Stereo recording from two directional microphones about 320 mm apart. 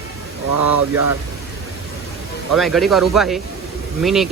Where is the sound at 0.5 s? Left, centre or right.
Right.